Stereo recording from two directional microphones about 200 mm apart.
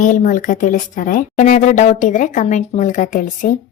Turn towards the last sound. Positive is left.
turn(degrees=40)  # may be behind; listen again after turning